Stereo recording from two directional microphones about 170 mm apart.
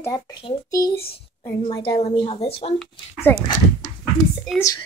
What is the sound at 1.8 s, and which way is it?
Speech, 35° left (ahead or behind).